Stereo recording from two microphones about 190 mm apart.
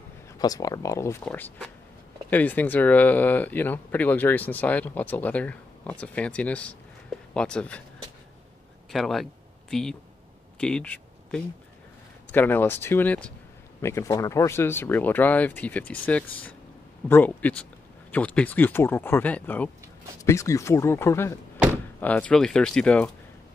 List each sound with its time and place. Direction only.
0.4 s speech: 20° left (ahead or behind)
8.9 s speech: centre (ahead or behind)